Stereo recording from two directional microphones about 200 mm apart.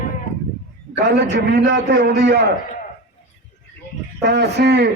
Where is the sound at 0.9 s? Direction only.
55° right (ahead or behind).